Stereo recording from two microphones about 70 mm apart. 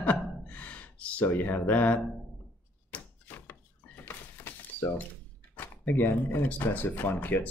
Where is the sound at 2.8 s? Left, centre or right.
Left.